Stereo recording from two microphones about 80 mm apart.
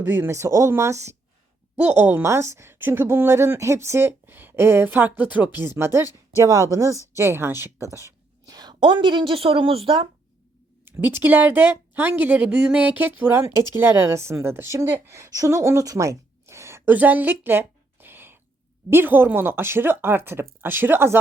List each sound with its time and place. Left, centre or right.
0.0 s a woman's voice: right
1.7 s speech: right
2.2 s speech: right
6.3 s a woman's voice: right
7.2 s a woman's voice: right
8.4 s a woman's voice: right
10.8 s speech: right
13.4 s a woman's voice: right
16.9 s a sound: right
18.9 s speech: right